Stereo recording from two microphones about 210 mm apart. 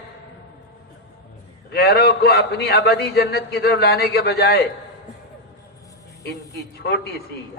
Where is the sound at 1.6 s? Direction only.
50° left (ahead or behind).